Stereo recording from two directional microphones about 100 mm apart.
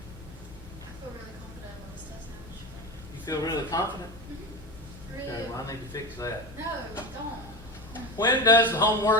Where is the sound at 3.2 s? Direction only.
40° left (ahead or behind).